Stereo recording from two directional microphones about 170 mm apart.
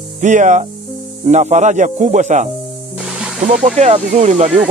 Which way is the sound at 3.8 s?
40° right (ahead or behind).